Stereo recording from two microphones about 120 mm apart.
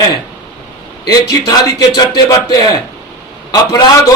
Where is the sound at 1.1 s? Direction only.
35° left (ahead or behind).